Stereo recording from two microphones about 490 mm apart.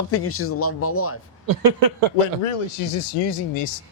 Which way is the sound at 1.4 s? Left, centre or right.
Right.